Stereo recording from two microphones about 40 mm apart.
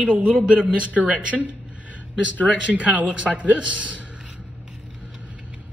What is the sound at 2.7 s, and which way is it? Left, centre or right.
A woman's voice, right.